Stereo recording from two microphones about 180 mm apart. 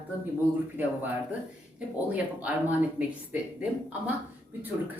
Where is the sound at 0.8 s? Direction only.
10° right (ahead or behind).